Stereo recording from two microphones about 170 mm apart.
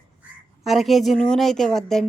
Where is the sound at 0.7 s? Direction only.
Centre (ahead or behind).